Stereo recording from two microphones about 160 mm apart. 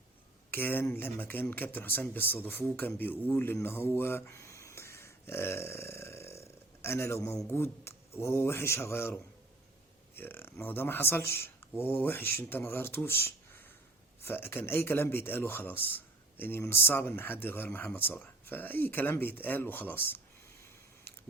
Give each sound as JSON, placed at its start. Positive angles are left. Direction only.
{"t": 0.5, "sound": "speech", "side_deg": 15}
{"t": 10.2, "sound": "speech", "side_deg": 15}
{"t": 20.1, "sound": "a sound", "side_deg": 15}